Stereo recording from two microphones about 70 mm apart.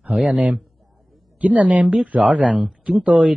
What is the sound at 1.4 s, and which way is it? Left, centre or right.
Speech, centre.